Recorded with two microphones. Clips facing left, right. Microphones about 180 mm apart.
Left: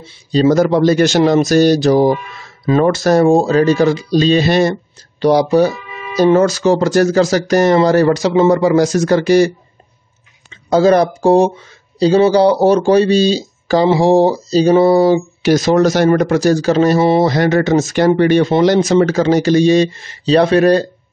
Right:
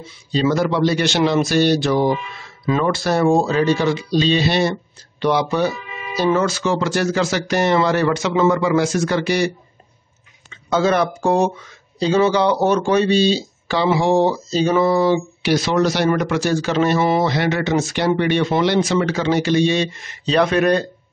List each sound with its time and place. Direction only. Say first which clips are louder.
0.3 s speech: left 7 dB; 40° left (ahead or behind)
10.7 s speech: left 7 dB; 35° left (ahead or behind)